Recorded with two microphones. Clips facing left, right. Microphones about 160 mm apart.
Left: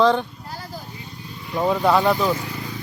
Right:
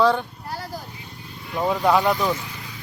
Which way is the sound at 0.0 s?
10° right (ahead or behind).